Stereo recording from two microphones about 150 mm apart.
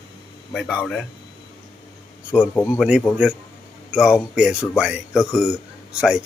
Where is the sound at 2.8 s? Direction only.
5° right (ahead or behind).